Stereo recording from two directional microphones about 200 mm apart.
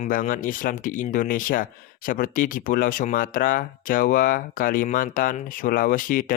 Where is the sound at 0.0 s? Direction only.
40° left (ahead or behind).